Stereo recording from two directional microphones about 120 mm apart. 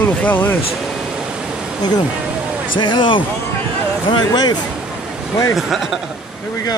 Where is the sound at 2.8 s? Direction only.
40° left (ahead or behind).